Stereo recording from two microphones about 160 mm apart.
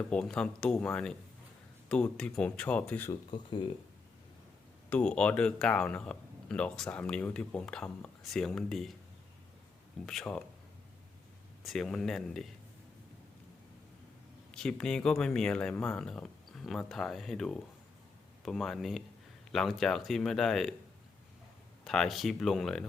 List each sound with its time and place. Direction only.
0.1 s speech: 5° left (ahead or behind)
3.1 s speech: 30° left (ahead or behind)
4.9 s speech: 5° left (ahead or behind)
10.1 s speech: 5° left (ahead or behind)
11.6 s speech: centre (ahead or behind)
14.5 s speech: 5° left (ahead or behind)
21.8 s speech: centre (ahead or behind)